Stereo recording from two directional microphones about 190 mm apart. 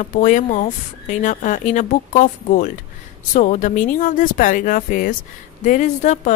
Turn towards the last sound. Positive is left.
turn(degrees=40)  # may be behind; listen again after turning